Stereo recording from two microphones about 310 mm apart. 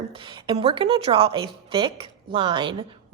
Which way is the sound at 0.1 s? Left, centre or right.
Centre.